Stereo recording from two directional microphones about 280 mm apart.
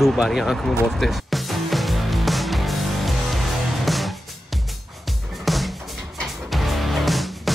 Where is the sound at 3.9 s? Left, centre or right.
Centre.